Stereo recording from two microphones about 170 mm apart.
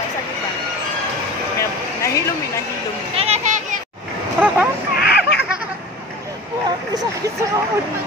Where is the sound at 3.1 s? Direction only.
35° right (ahead or behind).